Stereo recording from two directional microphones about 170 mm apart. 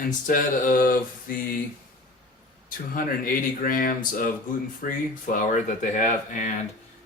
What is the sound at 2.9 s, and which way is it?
Speech, 55° left (ahead or behind).